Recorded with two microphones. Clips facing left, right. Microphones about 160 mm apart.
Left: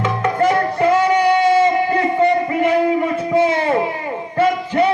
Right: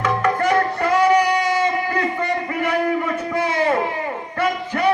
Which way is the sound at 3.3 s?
25° left (ahead or behind).